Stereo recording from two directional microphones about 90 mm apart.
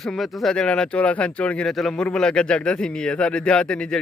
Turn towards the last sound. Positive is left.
turn(degrees=10)  # may be behind; listen again after turning